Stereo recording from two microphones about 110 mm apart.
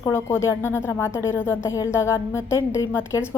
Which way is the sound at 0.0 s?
25° left (ahead or behind).